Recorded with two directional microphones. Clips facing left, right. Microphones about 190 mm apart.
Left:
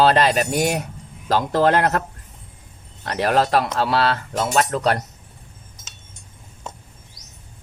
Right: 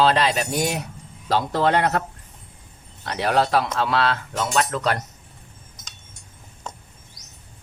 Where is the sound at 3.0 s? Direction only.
45° left (ahead or behind).